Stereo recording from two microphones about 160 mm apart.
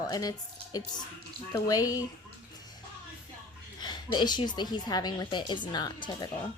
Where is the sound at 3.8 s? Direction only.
25° left (ahead or behind).